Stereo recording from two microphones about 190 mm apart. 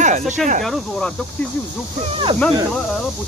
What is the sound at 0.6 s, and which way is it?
Speech, centre (ahead or behind).